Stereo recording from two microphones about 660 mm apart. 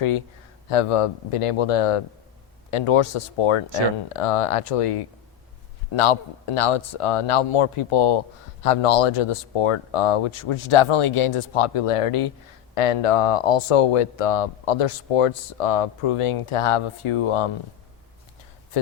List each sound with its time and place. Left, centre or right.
0.7 s speech: left